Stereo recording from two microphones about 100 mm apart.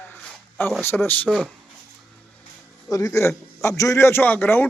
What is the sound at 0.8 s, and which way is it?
Speech, 25° left (ahead or behind).